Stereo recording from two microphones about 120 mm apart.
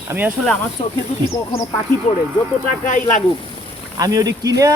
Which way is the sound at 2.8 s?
90° left.